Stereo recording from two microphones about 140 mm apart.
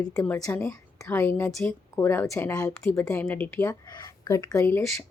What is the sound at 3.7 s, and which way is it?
A woman's voice, 30° left (ahead or behind).